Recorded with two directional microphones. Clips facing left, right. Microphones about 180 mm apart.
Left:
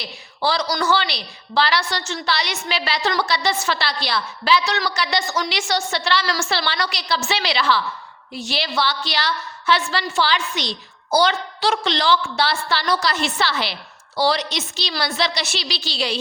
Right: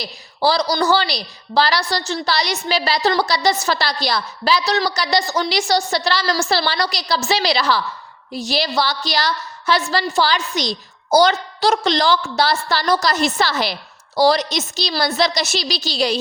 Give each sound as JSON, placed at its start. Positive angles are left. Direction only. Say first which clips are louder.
{"t": 0.0, "sound": "a woman's voice", "louder": "right 4 dB", "side_deg": -35}